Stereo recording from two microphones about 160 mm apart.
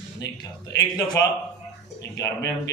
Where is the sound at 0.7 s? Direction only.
25° left (ahead or behind).